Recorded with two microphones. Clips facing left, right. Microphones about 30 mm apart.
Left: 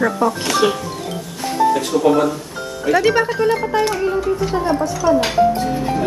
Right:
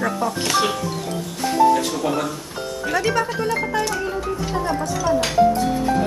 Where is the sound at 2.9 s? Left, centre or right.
Left.